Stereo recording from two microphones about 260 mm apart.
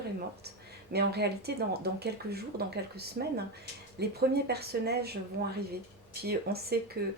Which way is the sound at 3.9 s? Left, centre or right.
Right.